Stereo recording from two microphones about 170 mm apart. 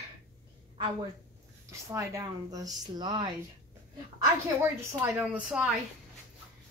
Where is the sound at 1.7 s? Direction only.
15° right (ahead or behind).